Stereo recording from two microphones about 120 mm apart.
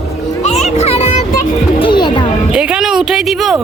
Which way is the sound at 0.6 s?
65° left (ahead or behind).